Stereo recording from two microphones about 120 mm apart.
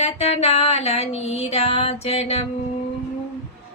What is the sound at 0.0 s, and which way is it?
Music, 55° left (ahead or behind).